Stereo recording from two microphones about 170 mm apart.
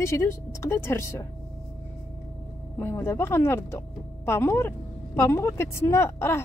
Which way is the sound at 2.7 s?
15° left (ahead or behind).